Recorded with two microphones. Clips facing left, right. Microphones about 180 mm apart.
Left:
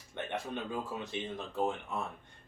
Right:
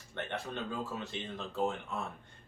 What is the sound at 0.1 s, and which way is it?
Speech, 15° left (ahead or behind).